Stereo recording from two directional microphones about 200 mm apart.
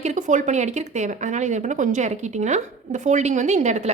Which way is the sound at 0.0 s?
35° right (ahead or behind).